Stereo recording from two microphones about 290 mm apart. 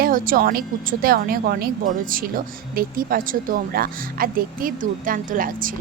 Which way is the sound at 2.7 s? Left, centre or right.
Right.